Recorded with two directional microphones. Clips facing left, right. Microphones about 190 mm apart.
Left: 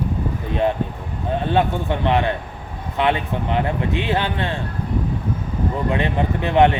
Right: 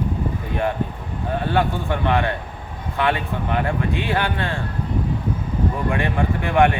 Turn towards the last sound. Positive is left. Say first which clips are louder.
# left 2 dB
turn(degrees=20)  # may be behind; listen again after turning